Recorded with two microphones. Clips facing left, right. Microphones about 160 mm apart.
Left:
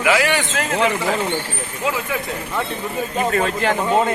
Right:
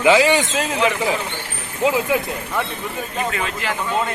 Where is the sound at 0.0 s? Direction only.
20° right (ahead or behind).